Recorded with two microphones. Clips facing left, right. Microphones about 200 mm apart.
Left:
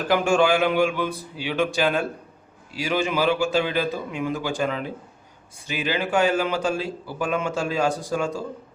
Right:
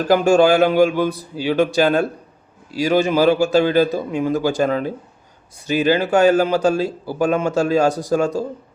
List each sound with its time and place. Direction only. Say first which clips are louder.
0.1 s speech: right 6 dB; 40° right (ahead or behind)